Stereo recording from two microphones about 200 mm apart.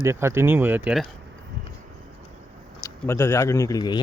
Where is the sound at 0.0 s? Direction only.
15° right (ahead or behind).